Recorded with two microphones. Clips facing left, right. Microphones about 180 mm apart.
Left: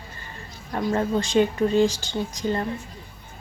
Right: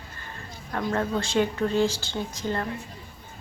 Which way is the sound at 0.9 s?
15° left (ahead or behind).